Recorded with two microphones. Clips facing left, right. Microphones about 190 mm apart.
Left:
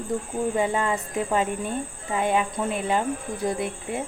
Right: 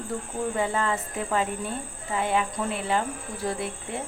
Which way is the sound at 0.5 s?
20° left (ahead or behind).